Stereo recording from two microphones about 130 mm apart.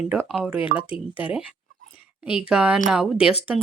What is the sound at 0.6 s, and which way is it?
Speech, 40° left (ahead or behind).